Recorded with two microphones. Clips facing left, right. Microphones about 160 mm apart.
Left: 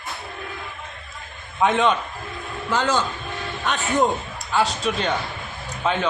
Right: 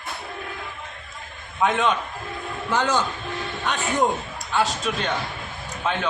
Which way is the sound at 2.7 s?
15° right (ahead or behind).